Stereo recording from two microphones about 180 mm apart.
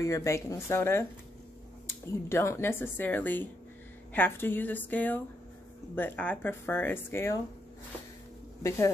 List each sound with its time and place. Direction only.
0.0 s speech: 15° left (ahead or behind)
8.6 s speech: 15° left (ahead or behind)